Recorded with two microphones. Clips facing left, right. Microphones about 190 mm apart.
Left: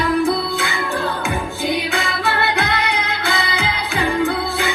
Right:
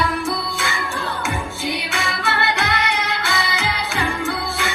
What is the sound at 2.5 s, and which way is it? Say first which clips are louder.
Music: left 2 dB; 55° left (ahead or behind).